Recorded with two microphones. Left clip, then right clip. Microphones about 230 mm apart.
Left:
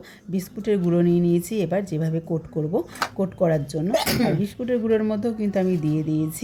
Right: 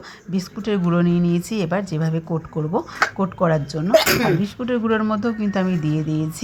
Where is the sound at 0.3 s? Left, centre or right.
Centre.